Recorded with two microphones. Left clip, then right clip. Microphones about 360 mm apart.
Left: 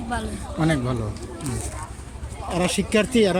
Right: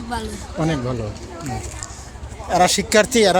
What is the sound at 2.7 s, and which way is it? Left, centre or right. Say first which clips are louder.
Speech: right 6 dB; centre.